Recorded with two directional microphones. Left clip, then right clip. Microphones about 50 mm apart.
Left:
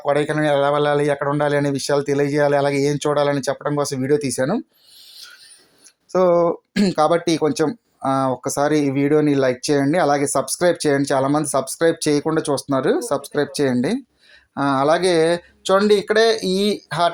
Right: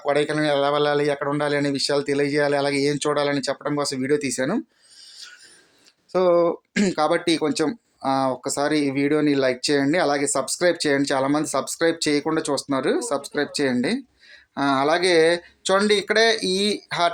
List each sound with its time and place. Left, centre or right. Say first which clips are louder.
0.0 s speech: left 2 dB; left
6.1 s speech: left 3 dB; left
6.5 s speech: left 2 dB; centre
6.9 s speech: left 4 dB; left
7.7 s speech: left 2 dB; centre
8.4 s speech: left 4 dB; left
8.9 s speech: left 4 dB; left
9.4 s speech: left 2 dB; left